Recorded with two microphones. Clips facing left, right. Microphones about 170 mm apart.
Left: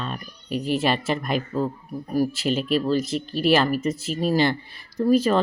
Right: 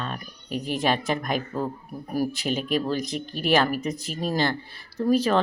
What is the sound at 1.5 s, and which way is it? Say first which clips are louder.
Speech: left 4 dB; 5° right (ahead or behind).